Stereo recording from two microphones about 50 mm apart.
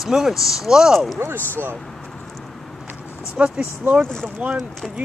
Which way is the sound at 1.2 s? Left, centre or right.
Right.